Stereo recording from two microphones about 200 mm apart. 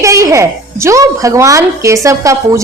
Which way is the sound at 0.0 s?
15° right (ahead or behind).